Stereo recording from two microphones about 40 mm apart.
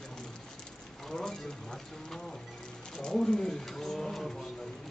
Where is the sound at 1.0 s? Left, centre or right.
Centre.